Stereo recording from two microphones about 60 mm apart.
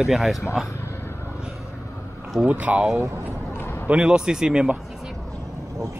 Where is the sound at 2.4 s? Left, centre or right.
Right.